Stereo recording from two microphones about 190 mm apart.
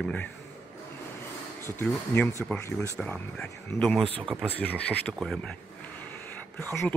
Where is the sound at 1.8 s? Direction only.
10° left (ahead or behind).